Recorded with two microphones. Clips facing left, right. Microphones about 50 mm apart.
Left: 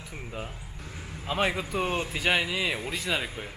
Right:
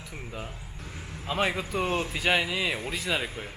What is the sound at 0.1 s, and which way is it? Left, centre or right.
A man's voice, centre.